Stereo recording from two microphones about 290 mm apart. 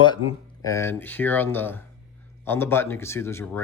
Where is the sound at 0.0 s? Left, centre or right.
Centre.